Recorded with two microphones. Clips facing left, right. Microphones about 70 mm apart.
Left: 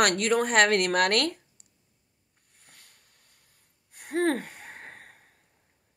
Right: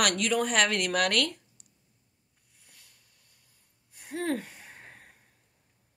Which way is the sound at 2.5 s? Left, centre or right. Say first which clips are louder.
Left 4 dB; left.